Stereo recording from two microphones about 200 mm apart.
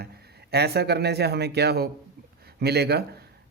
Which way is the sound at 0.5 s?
55° right (ahead or behind).